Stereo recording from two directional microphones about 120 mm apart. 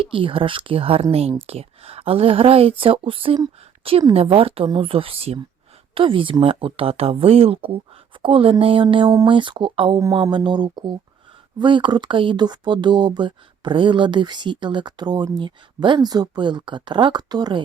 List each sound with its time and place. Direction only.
0.0 s speech: 45° right (ahead or behind)